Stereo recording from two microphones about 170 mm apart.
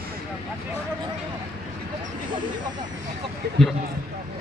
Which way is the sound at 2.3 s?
30° right (ahead or behind).